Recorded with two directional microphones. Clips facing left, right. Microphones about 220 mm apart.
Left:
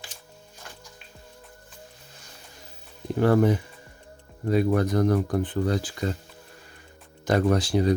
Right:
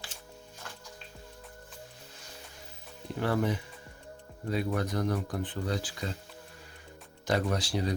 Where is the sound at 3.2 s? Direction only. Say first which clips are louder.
Left 9 dB; 45° left (ahead or behind).